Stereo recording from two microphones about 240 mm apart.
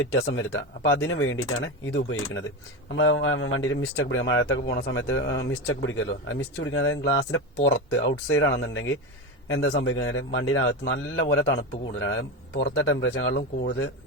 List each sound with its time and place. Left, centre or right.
0.0 s speech: left